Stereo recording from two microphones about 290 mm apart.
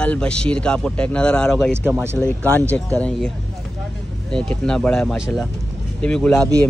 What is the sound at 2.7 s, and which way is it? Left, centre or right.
Speech, centre.